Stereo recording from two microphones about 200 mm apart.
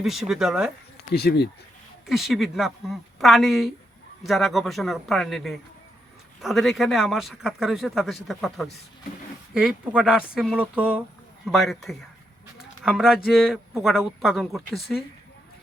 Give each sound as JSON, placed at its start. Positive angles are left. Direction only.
{"t": 0.0, "sound": "a man's voice", "side_deg": 0}
{"t": 1.1, "sound": "speech", "side_deg": 55}
{"t": 2.0, "sound": "a man's voice", "side_deg": 0}